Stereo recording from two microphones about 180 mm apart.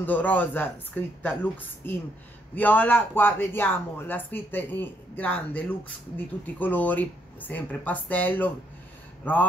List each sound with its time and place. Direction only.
0.0 s speech: 10° left (ahead or behind)